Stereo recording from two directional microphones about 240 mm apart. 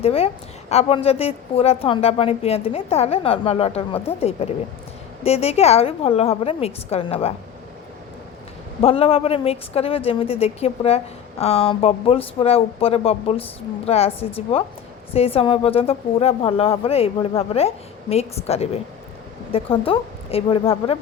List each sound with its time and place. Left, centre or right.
0.0 s a woman's voice: left
8.8 s a woman's voice: left